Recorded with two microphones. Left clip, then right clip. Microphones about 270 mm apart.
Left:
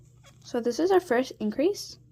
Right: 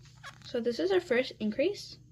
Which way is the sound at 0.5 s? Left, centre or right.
Left.